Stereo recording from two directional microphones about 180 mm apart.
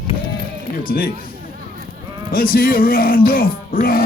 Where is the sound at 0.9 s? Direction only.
55° left (ahead or behind).